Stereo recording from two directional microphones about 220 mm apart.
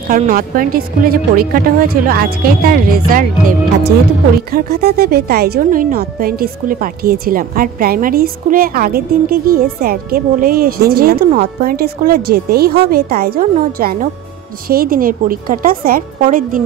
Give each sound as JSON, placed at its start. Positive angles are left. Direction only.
{"t": 0.1, "sound": "speech", "side_deg": -40}